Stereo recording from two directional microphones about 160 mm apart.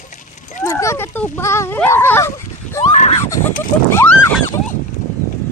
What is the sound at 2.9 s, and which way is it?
Speech, 50° left (ahead or behind).